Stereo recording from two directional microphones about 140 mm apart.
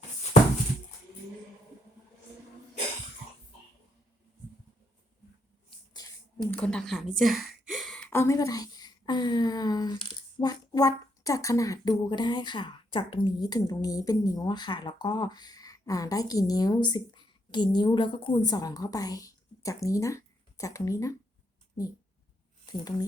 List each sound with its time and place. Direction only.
6.5 s speech: 5° left (ahead or behind)
7.2 s gasp: centre (ahead or behind)
8.1 s a woman's voice: 20° left (ahead or behind)
22.6 s speech: 30° left (ahead or behind)